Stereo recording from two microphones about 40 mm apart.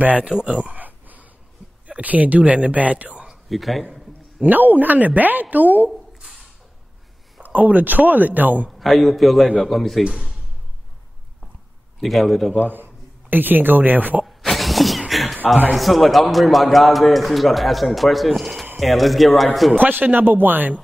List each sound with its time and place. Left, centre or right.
0.0 s speech: right
0.3 s speech: right
0.7 s a sound: right
1.9 s speech: right
3.4 s speech: centre
4.4 s a woman's voice: right
7.4 s a woman's voice: right
8.7 s a man's voice: centre
12.0 s a man's voice: centre
12.6 s speech: right
14.2 s a sound: centre
15.7 s a man's voice: centre
19.8 s a woman's voice: right